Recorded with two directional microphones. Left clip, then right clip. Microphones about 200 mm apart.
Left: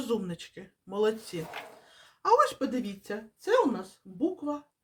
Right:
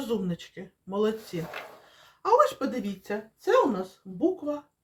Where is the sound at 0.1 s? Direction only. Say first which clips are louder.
Even; 20° left (ahead or behind).